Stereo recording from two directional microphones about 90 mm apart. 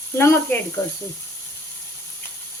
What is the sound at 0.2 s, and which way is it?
Speech, 30° left (ahead or behind).